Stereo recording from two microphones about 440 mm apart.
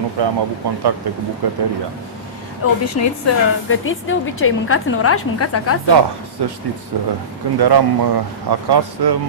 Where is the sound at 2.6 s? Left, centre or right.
Left.